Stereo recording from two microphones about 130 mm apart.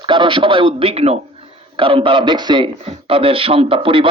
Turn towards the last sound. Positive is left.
turn(degrees=-40)  # may be behind; listen again after turning